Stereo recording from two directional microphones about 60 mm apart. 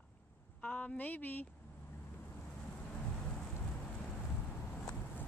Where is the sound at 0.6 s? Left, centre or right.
Centre.